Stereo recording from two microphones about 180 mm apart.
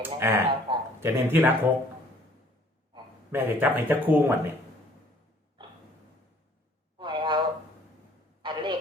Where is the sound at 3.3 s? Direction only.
10° right (ahead or behind).